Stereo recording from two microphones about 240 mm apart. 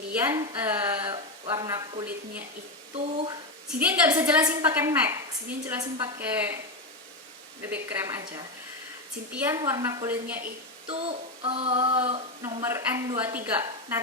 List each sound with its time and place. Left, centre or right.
0.1 s a woman's voice: centre
2.9 s child singing: right
3.8 s a woman's voice: centre
7.6 s a woman's voice: centre
10.8 s child singing: right